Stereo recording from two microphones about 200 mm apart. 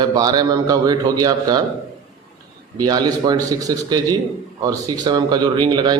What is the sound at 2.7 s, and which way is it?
A man's voice, 20° right (ahead or behind).